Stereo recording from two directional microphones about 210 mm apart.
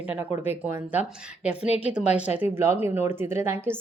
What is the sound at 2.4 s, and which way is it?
Speech, 10° right (ahead or behind).